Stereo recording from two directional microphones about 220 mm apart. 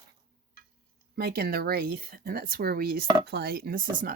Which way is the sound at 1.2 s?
45° right (ahead or behind).